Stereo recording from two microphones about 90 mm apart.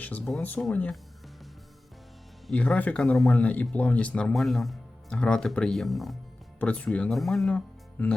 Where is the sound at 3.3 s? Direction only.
15° left (ahead or behind).